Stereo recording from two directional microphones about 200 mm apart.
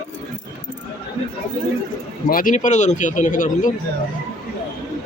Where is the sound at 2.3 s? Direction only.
40° left (ahead or behind).